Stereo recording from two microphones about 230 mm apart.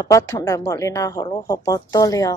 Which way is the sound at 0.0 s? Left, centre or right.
Centre.